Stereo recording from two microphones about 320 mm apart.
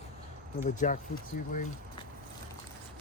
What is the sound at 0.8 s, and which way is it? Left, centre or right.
Speech, left.